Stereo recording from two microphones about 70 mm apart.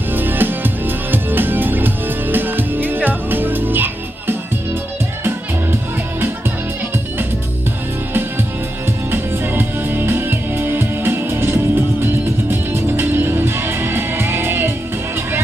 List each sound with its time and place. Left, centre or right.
0.1 s music: right
8.1 s music: right